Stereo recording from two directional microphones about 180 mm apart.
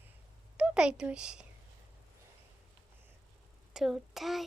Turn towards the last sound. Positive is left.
turn(degrees=0)  # may be behind; listen again after turning